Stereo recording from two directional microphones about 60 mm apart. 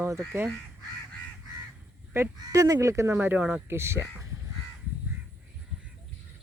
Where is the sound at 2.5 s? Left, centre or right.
Right.